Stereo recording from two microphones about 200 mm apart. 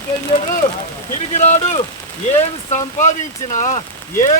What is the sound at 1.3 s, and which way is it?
Speech, 35° left (ahead or behind).